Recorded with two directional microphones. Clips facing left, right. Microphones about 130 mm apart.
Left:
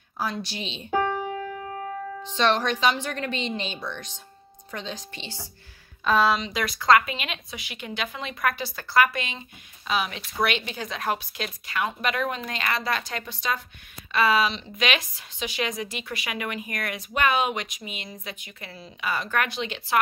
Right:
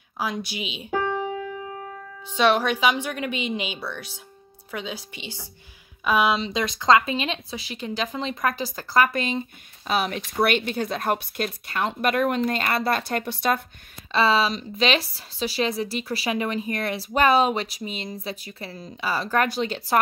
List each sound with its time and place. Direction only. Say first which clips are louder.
0.2 s a woman's voice: right 1 dB; 10° right (ahead or behind)
2.2 s a woman's voice: right 3 dB; 10° right (ahead or behind)
6.3 s speech: right 2 dB; 25° right (ahead or behind); by 13.6 s 60° right (ahead or behind)
14.1 s speech: right 2 dB; 30° right (ahead or behind)